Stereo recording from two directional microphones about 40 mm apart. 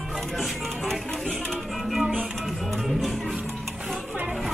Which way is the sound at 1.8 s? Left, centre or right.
Centre.